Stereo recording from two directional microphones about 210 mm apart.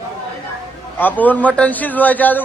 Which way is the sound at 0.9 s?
10° left (ahead or behind).